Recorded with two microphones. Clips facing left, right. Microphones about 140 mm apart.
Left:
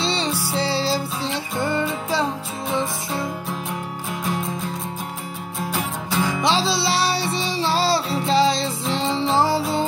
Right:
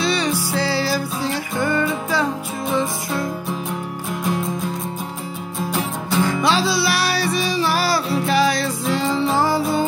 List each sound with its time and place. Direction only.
0.0 s music: 25° left (ahead or behind)
4.1 s music: centre (ahead or behind)
5.7 s music: centre (ahead or behind)
6.4 s music: 25° left (ahead or behind)